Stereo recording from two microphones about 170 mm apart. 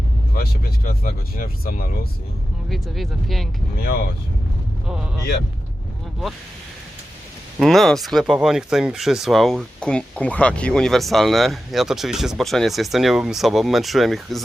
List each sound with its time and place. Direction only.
0.3 s speech: 60° left (ahead or behind)
2.6 s speech: centre (ahead or behind)
3.8 s speech: 65° left (ahead or behind)
7.6 s speech: centre (ahead or behind)